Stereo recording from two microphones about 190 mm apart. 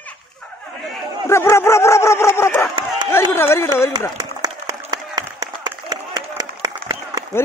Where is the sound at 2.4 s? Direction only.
15° left (ahead or behind).